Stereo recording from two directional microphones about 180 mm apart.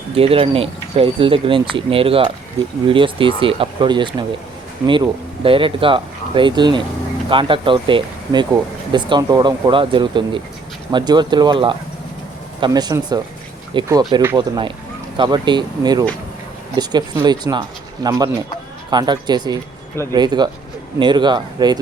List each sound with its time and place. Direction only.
0.1 s speech: 30° right (ahead or behind)